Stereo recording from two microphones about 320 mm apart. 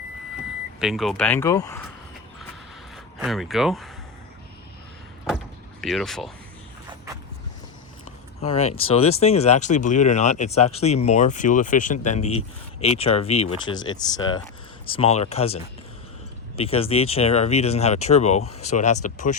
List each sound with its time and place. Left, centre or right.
0.8 s speech: centre
2.9 s speech: centre
5.8 s speech: centre
8.4 s speech: centre